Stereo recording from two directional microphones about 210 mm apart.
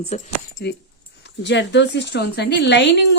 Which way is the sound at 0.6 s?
50° left (ahead or behind).